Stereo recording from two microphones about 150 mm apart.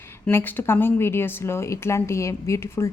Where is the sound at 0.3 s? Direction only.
15° left (ahead or behind).